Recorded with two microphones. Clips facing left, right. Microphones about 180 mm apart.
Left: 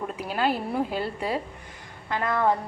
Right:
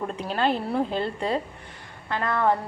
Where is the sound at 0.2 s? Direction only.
5° left (ahead or behind).